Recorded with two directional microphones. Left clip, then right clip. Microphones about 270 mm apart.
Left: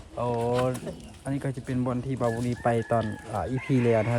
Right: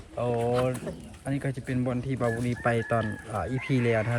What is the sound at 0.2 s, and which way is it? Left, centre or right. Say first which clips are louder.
Speech: even; centre.